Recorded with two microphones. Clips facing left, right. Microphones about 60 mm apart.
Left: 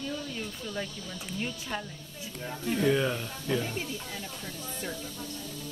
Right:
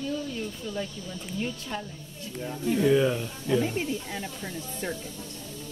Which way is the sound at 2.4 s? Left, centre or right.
Centre.